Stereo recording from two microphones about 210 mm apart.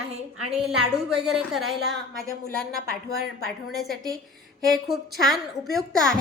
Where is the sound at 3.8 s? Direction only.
Centre (ahead or behind).